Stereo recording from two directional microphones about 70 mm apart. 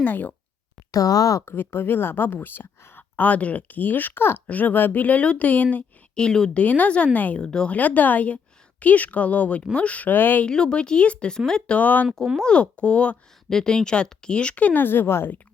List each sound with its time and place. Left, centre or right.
0.0 s speech: left
0.9 s speech: left
1.5 s speech: left; by 6.6 s centre
6.6 s speech: left
10.4 s speech: centre
11.8 s speech: left